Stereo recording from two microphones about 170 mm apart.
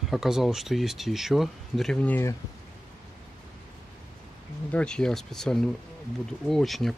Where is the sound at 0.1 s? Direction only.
Centre (ahead or behind).